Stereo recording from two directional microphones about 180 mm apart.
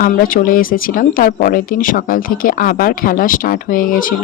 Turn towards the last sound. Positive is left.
turn(degrees=50)  # may be behind; listen again after turning